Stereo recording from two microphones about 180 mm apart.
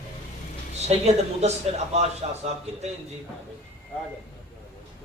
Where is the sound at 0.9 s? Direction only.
35° right (ahead or behind).